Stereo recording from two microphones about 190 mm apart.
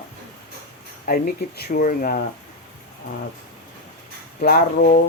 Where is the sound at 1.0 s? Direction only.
50° left (ahead or behind).